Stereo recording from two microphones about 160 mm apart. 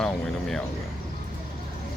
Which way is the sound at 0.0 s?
5° left (ahead or behind).